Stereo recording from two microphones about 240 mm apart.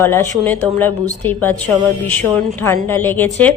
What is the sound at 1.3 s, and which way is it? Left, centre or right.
Speech, centre.